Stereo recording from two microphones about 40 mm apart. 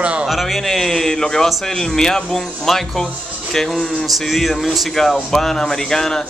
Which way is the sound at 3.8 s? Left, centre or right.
Left.